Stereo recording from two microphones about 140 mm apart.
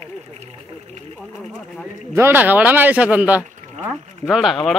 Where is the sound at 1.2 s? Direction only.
5° left (ahead or behind).